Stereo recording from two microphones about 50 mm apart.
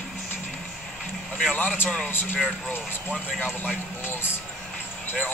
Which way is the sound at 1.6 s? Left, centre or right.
Left.